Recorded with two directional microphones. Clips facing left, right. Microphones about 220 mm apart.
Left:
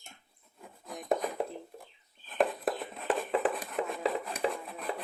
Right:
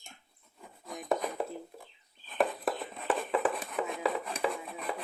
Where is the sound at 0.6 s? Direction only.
Centre (ahead or behind).